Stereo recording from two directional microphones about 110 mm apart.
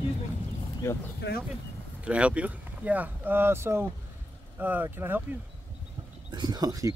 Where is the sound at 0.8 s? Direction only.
25° left (ahead or behind).